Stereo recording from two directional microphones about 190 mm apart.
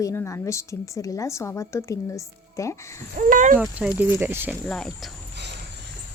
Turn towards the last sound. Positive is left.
turn(degrees=5)  # may be behind; listen again after turning